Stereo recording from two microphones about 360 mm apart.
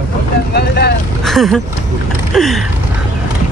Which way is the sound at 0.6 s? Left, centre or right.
Left.